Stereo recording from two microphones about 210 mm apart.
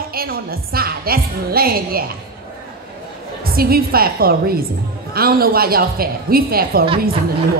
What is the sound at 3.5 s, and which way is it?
A woman's voice, 45° right (ahead or behind).